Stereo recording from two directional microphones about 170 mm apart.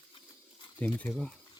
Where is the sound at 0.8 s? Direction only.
10° left (ahead or behind).